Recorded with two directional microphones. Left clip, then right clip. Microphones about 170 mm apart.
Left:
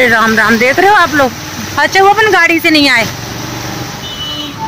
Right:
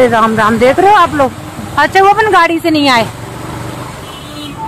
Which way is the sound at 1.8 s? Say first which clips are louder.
Even; 15° right (ahead or behind).